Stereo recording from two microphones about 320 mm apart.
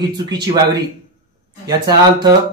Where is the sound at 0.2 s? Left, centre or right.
Centre.